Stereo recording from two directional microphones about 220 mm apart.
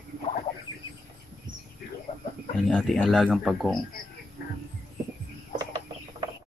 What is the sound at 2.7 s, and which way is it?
Speech, centre (ahead or behind).